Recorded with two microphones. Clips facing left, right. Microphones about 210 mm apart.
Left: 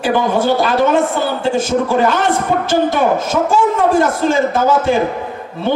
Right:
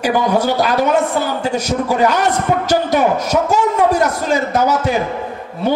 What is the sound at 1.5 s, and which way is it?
A man's voice, 40° right (ahead or behind).